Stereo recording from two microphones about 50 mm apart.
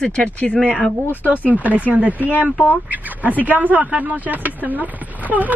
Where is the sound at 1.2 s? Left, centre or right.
Right.